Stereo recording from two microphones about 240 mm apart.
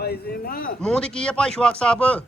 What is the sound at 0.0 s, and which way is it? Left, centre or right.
Speech, left.